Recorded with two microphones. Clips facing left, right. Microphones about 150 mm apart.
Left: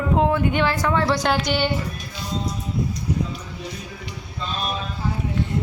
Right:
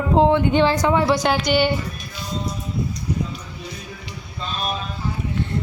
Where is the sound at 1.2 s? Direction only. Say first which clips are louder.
Right 3 dB; centre (ahead or behind).